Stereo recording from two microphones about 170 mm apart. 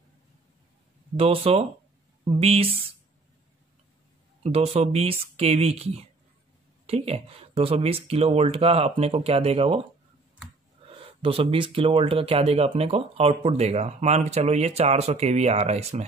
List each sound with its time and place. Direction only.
1.1 s speech: 35° right (ahead or behind)
4.4 s speech: 35° right (ahead or behind)
11.0 s speech: 35° right (ahead or behind)